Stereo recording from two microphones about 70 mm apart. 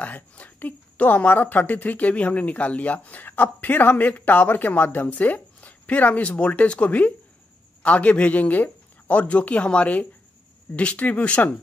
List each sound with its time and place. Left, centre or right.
0.0 s speech: left